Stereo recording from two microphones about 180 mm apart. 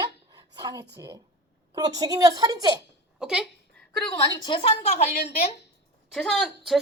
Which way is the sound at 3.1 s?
5° right (ahead or behind).